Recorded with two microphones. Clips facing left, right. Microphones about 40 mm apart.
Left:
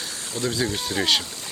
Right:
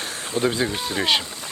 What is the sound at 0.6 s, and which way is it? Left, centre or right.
Speech, centre.